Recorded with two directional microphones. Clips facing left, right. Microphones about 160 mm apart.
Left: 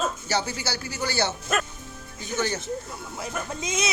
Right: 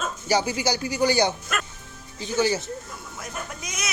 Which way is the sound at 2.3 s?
10° right (ahead or behind).